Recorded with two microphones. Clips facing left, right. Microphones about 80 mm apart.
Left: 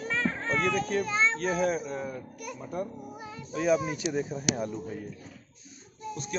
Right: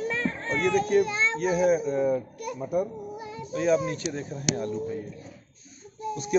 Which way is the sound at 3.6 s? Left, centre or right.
Centre.